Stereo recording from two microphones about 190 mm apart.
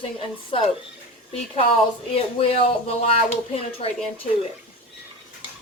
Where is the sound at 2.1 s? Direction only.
30° left (ahead or behind).